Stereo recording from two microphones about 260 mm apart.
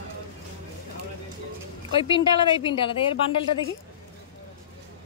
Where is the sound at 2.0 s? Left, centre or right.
Centre.